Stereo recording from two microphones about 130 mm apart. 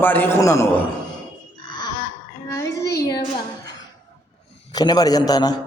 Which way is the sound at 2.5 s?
25° left (ahead or behind).